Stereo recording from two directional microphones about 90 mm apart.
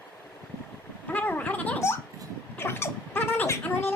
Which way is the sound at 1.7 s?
30° left (ahead or behind).